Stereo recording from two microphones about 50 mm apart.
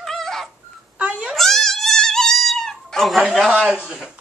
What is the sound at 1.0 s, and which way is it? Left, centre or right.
Cat, right.